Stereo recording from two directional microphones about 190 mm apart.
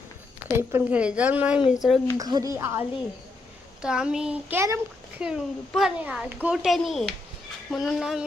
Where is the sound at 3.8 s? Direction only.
5° right (ahead or behind).